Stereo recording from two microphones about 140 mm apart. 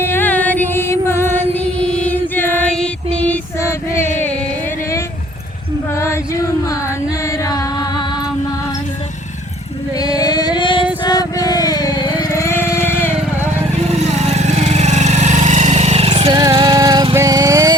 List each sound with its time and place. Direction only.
0.0 s music: 15° left (ahead or behind)
7.4 s music: 25° left (ahead or behind)
10.0 s a sound: 30° left (ahead or behind)
11.0 s music: 30° left (ahead or behind)
13.9 s vehicle: 50° right (ahead or behind); by 17.1 s 30° right (ahead or behind)
17.2 s music: 25° right (ahead or behind)